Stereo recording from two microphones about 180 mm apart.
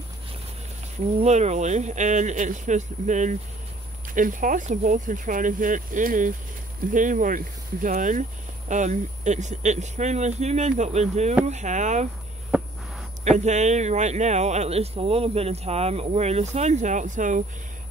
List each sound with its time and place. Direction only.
1.2 s speech: 40° right (ahead or behind)
12.5 s a sound: 5° right (ahead or behind)
13.2 s speech: 40° right (ahead or behind)